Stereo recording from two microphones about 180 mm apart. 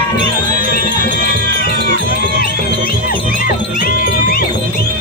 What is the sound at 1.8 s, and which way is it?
Music, 60° right (ahead or behind).